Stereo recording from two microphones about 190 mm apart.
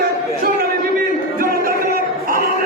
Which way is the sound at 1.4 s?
50° right (ahead or behind).